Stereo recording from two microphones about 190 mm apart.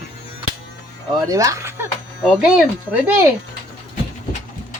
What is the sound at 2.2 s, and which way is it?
Speech, 5° right (ahead or behind).